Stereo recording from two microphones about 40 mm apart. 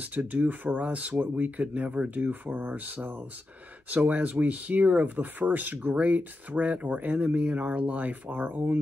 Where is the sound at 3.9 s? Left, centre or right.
Right.